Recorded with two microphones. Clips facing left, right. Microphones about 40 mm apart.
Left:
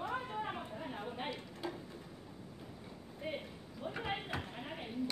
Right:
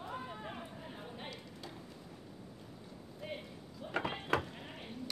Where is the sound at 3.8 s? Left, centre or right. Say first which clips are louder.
Left 5 dB; left.